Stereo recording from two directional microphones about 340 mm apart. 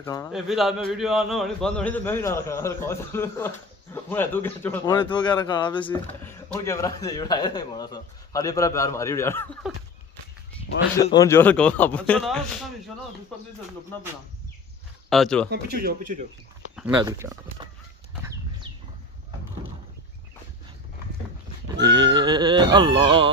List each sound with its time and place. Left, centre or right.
0.0 s a man's voice: centre
11.1 s a man's voice: centre
15.0 s speech: centre
15.5 s speech: right
16.7 s speech: centre
21.6 s speech: centre